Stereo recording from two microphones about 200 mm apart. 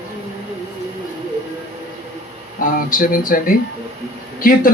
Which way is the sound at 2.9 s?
45° left (ahead or behind).